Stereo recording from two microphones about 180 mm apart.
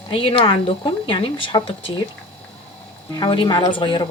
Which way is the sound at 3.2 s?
25° left (ahead or behind).